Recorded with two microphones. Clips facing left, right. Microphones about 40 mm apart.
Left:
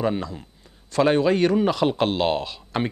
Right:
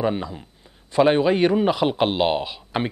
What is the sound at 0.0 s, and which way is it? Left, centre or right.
Speech, centre.